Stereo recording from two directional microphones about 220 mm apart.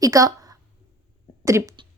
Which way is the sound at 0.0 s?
15° right (ahead or behind).